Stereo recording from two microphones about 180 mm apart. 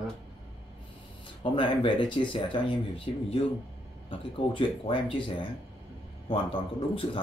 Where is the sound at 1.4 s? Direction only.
30° left (ahead or behind).